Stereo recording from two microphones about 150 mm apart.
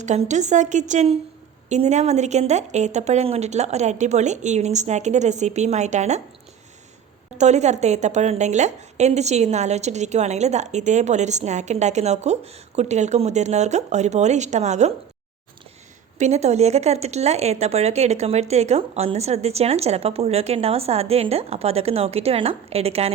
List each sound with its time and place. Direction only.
0.0 s a woman's voice: 50° right (ahead or behind)
7.3 s a woman's voice: 50° right (ahead or behind)
16.1 s a woman's voice: 50° right (ahead or behind)